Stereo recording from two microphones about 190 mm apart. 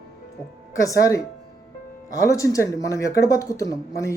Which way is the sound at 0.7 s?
15° left (ahead or behind).